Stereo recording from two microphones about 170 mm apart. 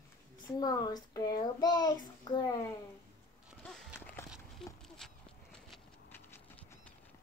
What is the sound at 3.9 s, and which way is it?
Walk, 15° left (ahead or behind).